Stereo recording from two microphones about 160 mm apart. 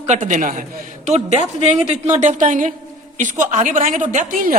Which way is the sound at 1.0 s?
45° right (ahead or behind).